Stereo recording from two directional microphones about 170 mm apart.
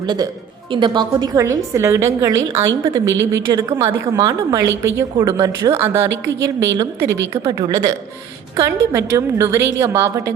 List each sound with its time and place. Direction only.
0.0 s a woman's voice: 25° right (ahead or behind)